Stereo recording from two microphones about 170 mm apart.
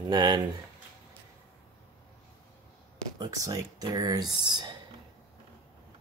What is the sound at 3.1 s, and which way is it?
Speech, 20° right (ahead or behind).